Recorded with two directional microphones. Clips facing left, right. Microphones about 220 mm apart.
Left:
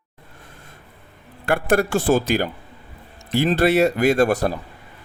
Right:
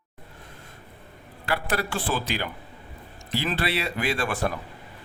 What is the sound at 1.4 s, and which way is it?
A man's voice, 50° left (ahead or behind).